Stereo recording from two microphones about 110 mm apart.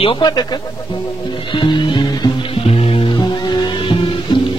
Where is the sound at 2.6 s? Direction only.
65° left (ahead or behind).